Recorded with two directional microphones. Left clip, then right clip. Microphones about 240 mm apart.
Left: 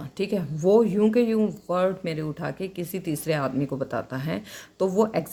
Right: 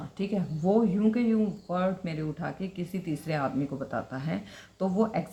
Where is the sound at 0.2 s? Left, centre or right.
Left.